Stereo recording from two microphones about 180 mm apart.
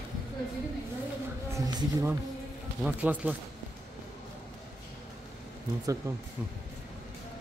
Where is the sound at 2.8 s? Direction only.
10° right (ahead or behind).